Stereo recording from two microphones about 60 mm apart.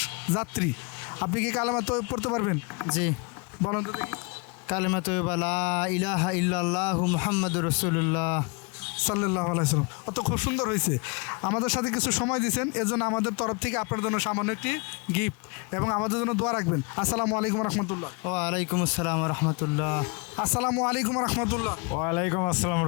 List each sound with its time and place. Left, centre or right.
0.0 s speech: centre
2.4 s speech: left
2.9 s speech: centre
9.4 s speech: left
9.7 s speech: centre
22.4 s speech: centre